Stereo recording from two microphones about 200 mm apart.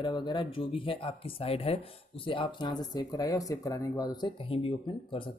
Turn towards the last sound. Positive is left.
turn(degrees=25)  # may be behind; listen again after turning